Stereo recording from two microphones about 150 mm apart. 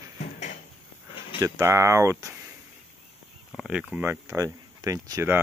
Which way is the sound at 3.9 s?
15° right (ahead or behind).